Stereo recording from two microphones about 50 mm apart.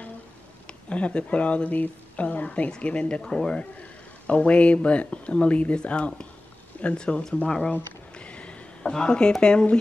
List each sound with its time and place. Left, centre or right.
0.7 s speech: left
8.1 s a sound: left
9.4 s speech: centre